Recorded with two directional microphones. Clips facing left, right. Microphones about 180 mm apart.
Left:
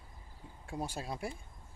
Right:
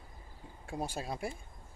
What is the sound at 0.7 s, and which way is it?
Speech, 15° right (ahead or behind).